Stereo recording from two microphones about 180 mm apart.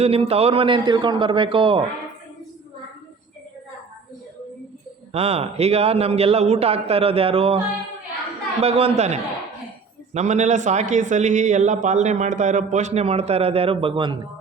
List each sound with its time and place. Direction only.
0.0 s a man's voice: 35° right (ahead or behind)
5.1 s a man's voice: 35° right (ahead or behind)
8.6 s a man's voice: 35° right (ahead or behind)